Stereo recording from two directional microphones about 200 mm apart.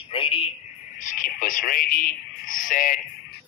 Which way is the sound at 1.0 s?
40° left (ahead or behind).